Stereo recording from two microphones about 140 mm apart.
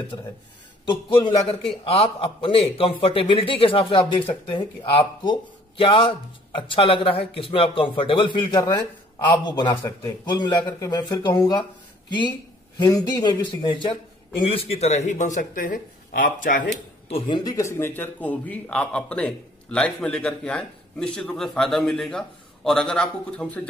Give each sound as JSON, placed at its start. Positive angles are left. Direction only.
{"t": 0.1, "sound": "a man's voice", "side_deg": 35}
{"t": 17.1, "sound": "speech", "side_deg": 30}